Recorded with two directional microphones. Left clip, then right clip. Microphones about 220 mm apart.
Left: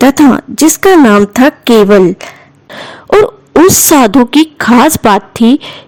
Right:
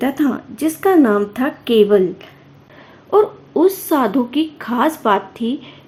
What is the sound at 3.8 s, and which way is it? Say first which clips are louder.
A woman's voice: left 11 dB; 50° left (ahead or behind).